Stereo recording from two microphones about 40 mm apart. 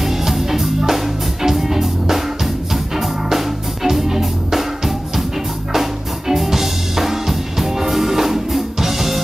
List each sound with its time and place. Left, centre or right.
0.0 s music: centre